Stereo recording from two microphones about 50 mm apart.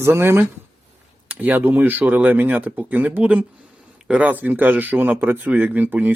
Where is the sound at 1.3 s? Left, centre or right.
Right.